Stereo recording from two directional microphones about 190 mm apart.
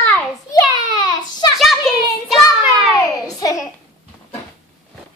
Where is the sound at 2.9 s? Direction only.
20° left (ahead or behind).